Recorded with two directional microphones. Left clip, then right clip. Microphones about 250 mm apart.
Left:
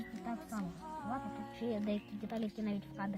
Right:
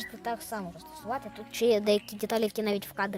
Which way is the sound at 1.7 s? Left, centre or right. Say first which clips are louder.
Right 15 dB; right.